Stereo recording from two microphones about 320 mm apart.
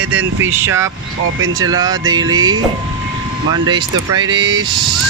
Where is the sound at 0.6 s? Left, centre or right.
Centre.